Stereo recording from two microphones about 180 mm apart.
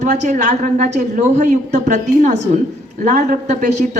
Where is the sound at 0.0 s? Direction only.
40° right (ahead or behind).